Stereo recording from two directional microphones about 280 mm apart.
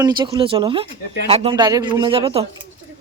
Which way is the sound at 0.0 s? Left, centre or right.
Centre.